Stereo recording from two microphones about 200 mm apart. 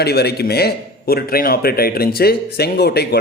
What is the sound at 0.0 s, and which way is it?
A man's voice, 55° left (ahead or behind).